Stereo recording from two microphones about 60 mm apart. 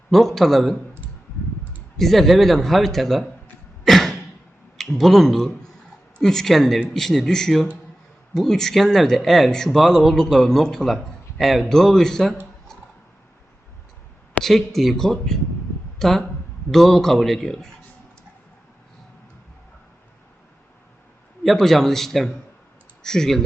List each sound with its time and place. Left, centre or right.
0.1 s a man's voice: centre
2.0 s a man's voice: centre
3.8 s a sound: centre
4.8 s a man's voice: centre
14.4 s a man's voice: centre
21.4 s a man's voice: centre